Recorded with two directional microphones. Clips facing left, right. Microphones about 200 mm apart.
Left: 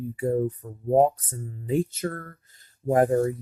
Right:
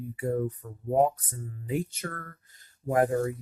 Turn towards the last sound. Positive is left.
turn(degrees=25)  # may be behind; listen again after turning